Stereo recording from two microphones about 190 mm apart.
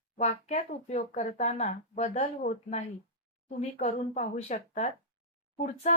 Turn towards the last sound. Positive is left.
turn(degrees=40)  # may be behind; listen again after turning